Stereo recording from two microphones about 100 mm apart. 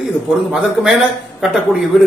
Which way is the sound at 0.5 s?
5° right (ahead or behind).